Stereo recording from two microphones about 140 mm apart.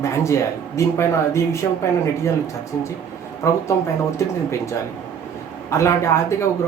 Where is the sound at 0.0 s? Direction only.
20° left (ahead or behind).